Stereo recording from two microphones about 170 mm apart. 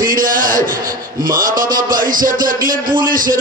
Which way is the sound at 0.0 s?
55° right (ahead or behind).